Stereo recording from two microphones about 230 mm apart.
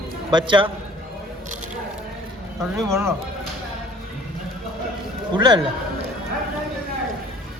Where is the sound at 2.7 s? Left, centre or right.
Centre.